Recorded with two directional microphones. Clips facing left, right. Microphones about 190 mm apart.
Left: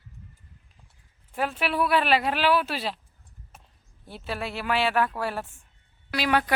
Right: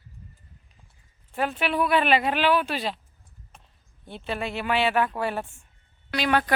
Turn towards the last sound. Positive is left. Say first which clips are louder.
# right 1 dB
turn(degrees=10)  # may be behind; listen again after turning